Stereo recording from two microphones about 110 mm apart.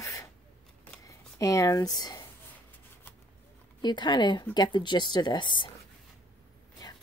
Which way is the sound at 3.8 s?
45° left (ahead or behind).